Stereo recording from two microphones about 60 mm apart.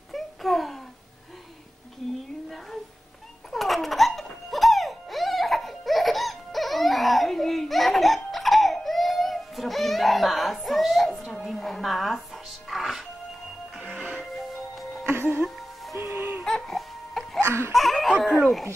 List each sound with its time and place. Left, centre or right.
0.1 s a sound: centre
3.5 s music: centre
15.0 s music: right
16.4 s music: centre
17.4 s wail: right
17.7 s a sound: centre